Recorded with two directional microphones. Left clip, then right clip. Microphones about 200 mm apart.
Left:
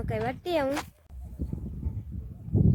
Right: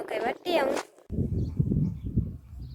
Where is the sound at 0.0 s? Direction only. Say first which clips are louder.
Right 2 dB; 5° right (ahead or behind).